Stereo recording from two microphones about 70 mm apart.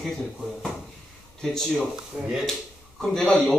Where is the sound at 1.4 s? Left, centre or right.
Centre.